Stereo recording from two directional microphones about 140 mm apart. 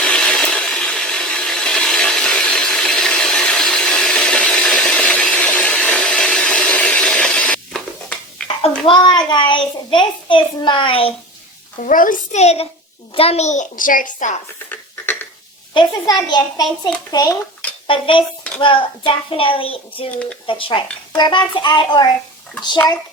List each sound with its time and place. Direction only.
0.0 s sawing: 5° left (ahead or behind)
8.9 s a child's voice: 30° left (ahead or behind)
11.8 s a child's voice: 70° left (ahead or behind)
12.4 s a child's voice: 50° left (ahead or behind); by 14.3 s 65° left (ahead or behind)
14.7 s a sound: 10° left (ahead or behind)
16.0 s a child's voice: 30° left (ahead or behind)
17.8 s a child's voice: 40° left (ahead or behind)